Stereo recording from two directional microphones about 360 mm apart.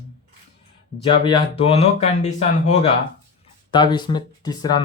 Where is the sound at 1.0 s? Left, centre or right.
Centre.